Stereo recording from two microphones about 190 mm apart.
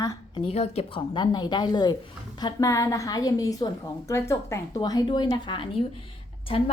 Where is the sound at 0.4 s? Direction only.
35° left (ahead or behind).